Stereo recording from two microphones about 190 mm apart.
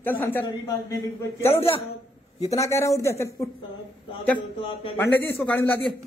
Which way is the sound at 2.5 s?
15° left (ahead or behind).